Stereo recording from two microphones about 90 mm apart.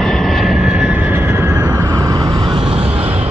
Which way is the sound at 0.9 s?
20° right (ahead or behind).